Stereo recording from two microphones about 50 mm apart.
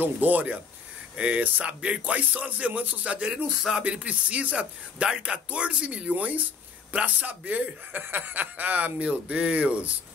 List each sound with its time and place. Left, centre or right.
0.0 s speech: right
1.1 s speech: right